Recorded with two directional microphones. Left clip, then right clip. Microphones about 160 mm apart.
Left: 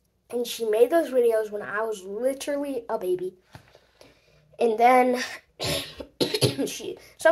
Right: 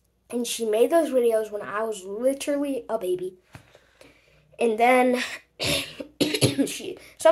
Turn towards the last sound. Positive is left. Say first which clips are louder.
# even
turn(degrees=-15)  # may be behind; listen again after turning